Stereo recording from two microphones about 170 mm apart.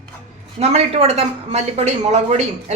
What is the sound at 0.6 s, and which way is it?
A woman's voice, 40° right (ahead or behind).